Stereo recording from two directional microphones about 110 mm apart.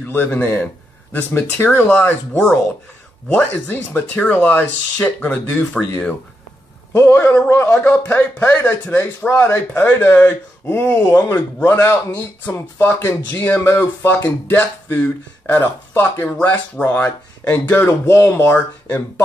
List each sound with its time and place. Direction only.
0.0 s speech: 20° left (ahead or behind)